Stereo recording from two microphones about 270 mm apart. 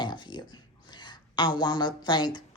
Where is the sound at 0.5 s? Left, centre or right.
Centre.